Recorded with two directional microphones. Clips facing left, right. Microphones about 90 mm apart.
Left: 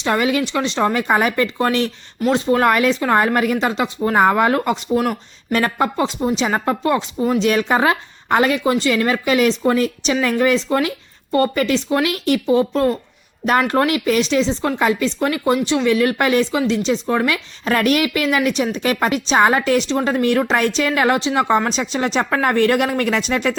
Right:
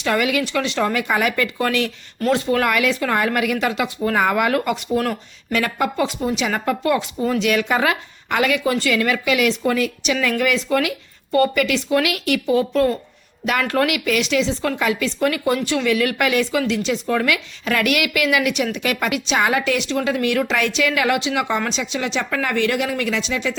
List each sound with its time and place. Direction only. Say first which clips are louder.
0.0 s speech: left 2 dB; 30° left (ahead or behind)
5.5 s speech: left 3 dB; 35° left (ahead or behind)
7.3 s speech: left 2 dB; 35° left (ahead or behind); by 23.6 s 50° left (ahead or behind)